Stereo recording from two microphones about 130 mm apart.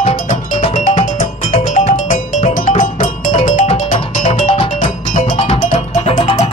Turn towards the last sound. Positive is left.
turn(degrees=55)  # may be behind; listen again after turning